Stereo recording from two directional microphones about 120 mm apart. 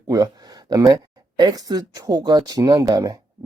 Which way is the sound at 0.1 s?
35° right (ahead or behind).